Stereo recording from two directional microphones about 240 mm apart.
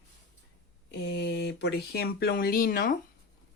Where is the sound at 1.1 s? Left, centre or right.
Left.